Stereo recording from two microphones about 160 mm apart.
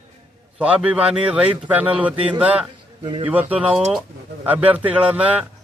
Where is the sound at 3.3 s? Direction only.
10° right (ahead or behind).